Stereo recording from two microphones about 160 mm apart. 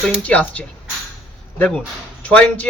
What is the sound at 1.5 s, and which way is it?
Speech, 5° left (ahead or behind).